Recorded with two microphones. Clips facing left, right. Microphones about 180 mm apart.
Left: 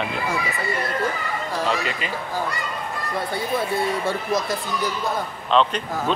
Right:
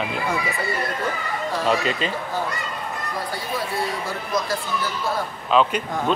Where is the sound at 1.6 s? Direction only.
20° right (ahead or behind).